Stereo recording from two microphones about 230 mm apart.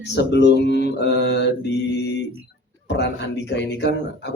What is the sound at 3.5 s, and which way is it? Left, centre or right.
Speech, left.